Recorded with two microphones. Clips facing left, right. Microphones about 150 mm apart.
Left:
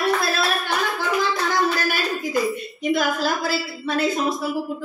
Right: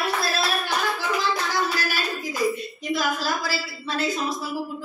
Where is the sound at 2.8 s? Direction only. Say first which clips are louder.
Left 7 dB; 55° left (ahead or behind).